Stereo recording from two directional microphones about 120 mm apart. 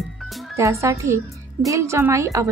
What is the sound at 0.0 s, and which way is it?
Music, centre (ahead or behind).